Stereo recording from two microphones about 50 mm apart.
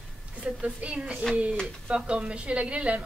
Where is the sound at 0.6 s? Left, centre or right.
Right.